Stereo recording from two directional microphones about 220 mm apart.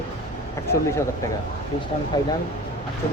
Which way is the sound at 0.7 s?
10° left (ahead or behind).